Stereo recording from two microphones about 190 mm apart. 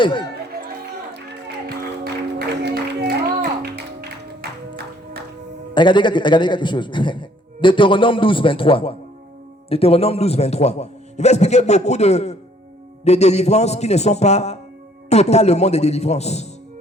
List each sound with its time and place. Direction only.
0.0 s a man's voice: 25° left (ahead or behind)
2.6 s music: 60° right (ahead or behind)
5.7 s a man's voice: 25° left (ahead or behind)